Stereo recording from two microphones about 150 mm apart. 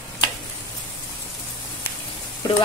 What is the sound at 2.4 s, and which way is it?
Speech, 25° left (ahead or behind).